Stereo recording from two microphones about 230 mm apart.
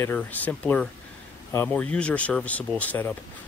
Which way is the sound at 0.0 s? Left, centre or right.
Centre.